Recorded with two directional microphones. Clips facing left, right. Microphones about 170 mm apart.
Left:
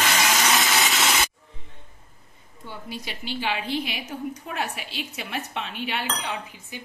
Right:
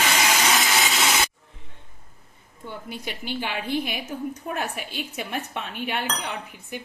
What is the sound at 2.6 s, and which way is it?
Dishes, 55° right (ahead or behind).